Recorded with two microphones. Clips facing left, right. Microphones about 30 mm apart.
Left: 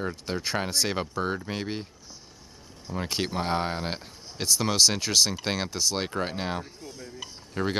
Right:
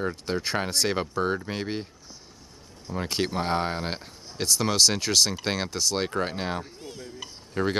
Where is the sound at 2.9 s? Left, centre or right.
Centre.